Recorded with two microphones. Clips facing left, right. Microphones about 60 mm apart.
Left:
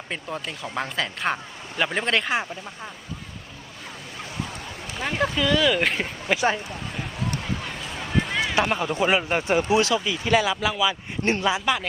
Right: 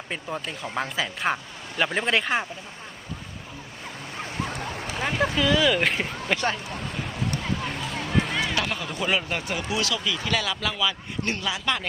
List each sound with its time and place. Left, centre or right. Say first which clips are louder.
0.1 s speech: even; centre
4.4 s a sound: right 4 dB; right
4.9 s speech: even; centre
8.3 s run: left 1 dB; centre
8.5 s speech: left 5 dB; left
11.2 s speech: left 6 dB; left
11.6 s speech: left 3 dB; centre